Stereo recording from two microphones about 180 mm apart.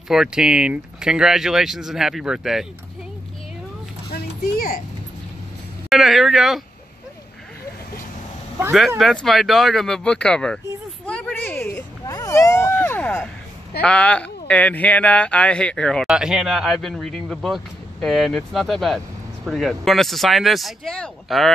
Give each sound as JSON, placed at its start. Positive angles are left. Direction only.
{"t": 0.1, "sound": "speech", "side_deg": -5}
{"t": 4.1, "sound": "a sound", "side_deg": 55}
{"t": 5.9, "sound": "speech", "side_deg": 0}
{"t": 8.7, "sound": "speech", "side_deg": 0}
{"t": 11.1, "sound": "a sound", "side_deg": 5}
{"t": 13.7, "sound": "speech", "side_deg": 5}